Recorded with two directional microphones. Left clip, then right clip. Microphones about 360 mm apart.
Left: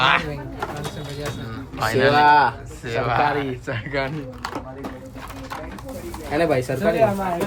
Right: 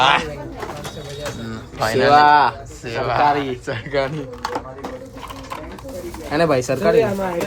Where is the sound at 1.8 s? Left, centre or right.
Centre.